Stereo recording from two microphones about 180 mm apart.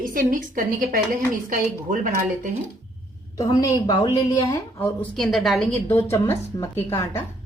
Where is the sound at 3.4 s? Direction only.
20° left (ahead or behind).